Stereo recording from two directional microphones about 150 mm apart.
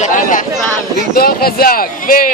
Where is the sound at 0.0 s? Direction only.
60° left (ahead or behind).